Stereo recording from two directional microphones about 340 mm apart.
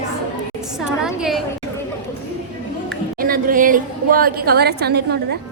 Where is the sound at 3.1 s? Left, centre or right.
Right.